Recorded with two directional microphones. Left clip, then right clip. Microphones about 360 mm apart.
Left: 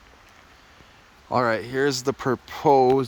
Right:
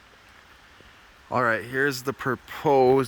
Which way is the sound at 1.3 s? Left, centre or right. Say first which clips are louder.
Left 1 dB; centre.